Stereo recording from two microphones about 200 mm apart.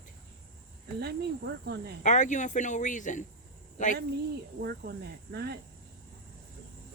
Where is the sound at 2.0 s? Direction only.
40° left (ahead or behind).